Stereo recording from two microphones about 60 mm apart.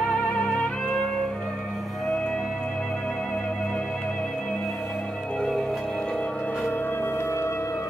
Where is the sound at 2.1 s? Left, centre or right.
Centre.